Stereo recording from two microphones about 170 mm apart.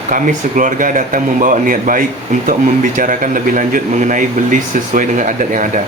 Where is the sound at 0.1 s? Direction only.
50° right (ahead or behind).